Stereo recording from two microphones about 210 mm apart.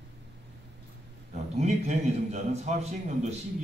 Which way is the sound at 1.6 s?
30° right (ahead or behind).